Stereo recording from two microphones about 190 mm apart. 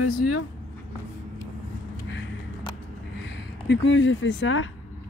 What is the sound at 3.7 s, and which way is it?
Speech, 75° left (ahead or behind).